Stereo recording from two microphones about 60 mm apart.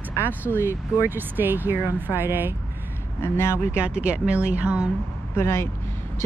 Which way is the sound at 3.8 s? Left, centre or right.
Centre.